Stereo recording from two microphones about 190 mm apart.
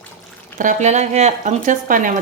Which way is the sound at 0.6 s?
40° right (ahead or behind).